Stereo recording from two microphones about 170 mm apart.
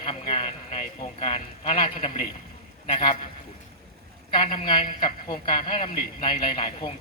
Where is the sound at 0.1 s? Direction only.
40° left (ahead or behind).